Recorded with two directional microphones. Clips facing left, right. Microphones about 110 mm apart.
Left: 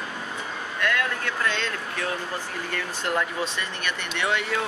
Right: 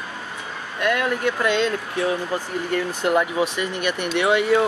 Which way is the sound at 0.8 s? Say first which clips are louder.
Right 6 dB; 20° right (ahead or behind).